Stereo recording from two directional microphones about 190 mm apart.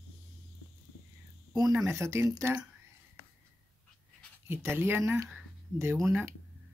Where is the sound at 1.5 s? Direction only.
20° right (ahead or behind).